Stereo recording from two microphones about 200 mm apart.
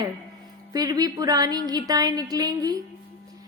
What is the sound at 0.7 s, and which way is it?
Speech, 20° right (ahead or behind).